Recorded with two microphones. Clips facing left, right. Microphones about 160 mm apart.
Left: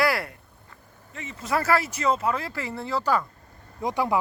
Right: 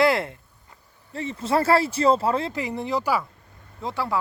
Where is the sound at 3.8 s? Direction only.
15° left (ahead or behind).